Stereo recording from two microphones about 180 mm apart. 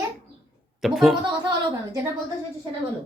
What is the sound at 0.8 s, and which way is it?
Speech, centre (ahead or behind).